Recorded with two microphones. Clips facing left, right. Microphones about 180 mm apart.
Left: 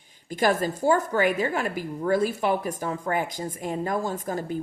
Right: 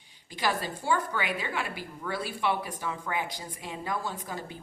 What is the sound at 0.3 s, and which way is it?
A woman's voice, 50° left (ahead or behind).